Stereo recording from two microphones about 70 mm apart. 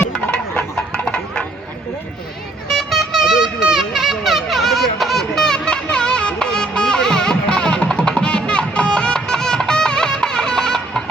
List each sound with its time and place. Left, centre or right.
0.1 s music: centre
2.6 s vehicle: centre